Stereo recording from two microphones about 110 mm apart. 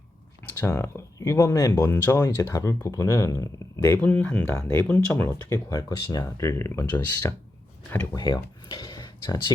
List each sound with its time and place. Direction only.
0.6 s speech: 25° left (ahead or behind)
1.9 s speech: 20° left (ahead or behind)
2.2 s speech: 30° left (ahead or behind)
4.0 s speech: 10° left (ahead or behind)
5.5 s speech: 30° left (ahead or behind)
8.7 s speech: 45° left (ahead or behind)